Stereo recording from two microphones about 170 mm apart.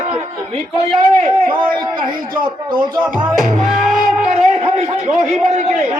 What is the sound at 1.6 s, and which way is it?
A man's voice, 30° right (ahead or behind).